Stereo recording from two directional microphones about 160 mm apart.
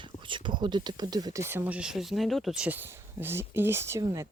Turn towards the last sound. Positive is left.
turn(degrees=-20)  # may be behind; listen again after turning